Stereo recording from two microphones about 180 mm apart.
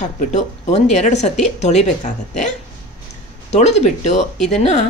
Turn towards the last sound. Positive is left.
turn(degrees=35)  # may be behind; listen again after turning